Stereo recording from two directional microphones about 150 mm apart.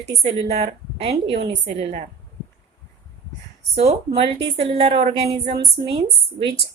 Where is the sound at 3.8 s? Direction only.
40° right (ahead or behind).